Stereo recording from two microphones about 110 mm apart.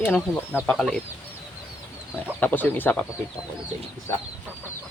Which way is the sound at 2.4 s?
15° left (ahead or behind).